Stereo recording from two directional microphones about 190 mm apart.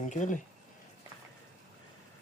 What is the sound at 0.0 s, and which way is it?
Speech, 40° left (ahead or behind).